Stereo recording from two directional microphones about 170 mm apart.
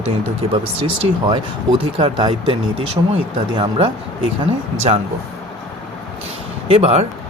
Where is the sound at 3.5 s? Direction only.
30° right (ahead or behind).